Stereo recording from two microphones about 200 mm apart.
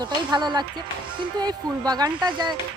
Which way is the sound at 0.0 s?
20° right (ahead or behind).